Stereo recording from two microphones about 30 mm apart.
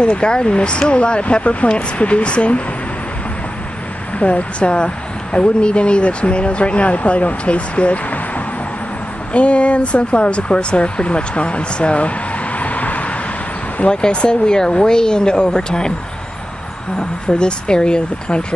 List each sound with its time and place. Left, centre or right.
0.0 s speech: left
1.4 s speech: left
4.2 s speech: left
9.3 s speech: left
12.5 s vehicle: left
13.8 s speech: left
16.9 s speech: left